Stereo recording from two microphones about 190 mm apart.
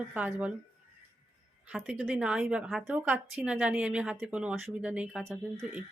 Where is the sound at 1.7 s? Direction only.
5° right (ahead or behind).